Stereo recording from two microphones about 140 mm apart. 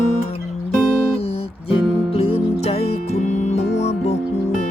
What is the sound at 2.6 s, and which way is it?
Music, 50° left (ahead or behind).